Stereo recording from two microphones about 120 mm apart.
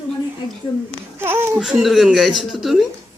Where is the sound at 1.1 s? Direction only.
20° right (ahead or behind).